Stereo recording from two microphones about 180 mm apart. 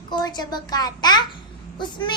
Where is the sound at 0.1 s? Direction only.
25° left (ahead or behind).